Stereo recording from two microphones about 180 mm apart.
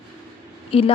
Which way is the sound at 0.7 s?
30° left (ahead or behind).